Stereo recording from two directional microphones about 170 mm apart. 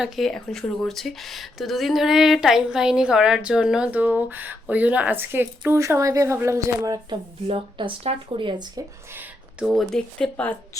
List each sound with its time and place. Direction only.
0.0 s speech: centre (ahead or behind); by 7.2 s 20° right (ahead or behind)
7.4 s speech: 30° right (ahead or behind)
9.1 s speech: 5° right (ahead or behind)